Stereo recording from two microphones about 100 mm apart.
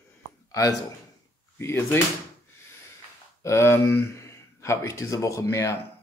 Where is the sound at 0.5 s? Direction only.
35° left (ahead or behind).